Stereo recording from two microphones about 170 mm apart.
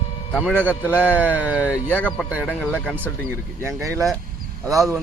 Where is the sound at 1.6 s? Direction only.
10° left (ahead or behind).